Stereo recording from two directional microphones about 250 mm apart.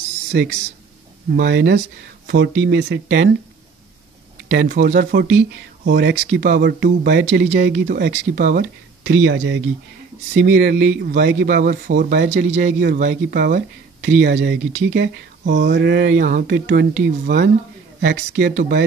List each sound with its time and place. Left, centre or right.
0.3 s speech: right
4.5 s speech: right